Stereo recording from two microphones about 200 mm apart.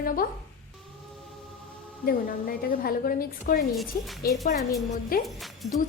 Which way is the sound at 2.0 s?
50° left (ahead or behind).